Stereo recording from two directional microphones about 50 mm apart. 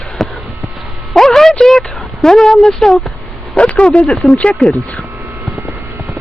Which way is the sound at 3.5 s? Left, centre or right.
Left.